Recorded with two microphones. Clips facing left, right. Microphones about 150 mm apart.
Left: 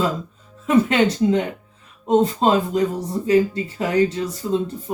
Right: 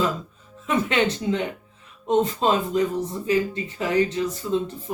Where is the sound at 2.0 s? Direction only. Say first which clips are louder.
Left 4 dB; 35° left (ahead or behind).